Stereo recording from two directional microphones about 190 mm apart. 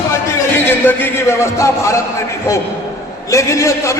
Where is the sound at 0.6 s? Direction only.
10° left (ahead or behind).